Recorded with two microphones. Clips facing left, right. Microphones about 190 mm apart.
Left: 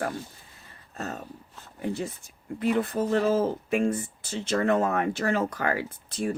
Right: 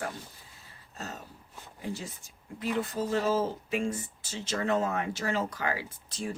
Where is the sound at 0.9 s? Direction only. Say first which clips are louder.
Left 6 dB; 55° left (ahead or behind).